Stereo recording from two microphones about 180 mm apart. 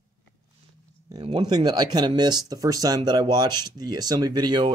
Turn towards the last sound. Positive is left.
turn(degrees=-25)  # may be behind; listen again after turning